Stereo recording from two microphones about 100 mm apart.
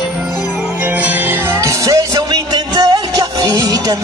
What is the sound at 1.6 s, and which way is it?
Music, 35° right (ahead or behind).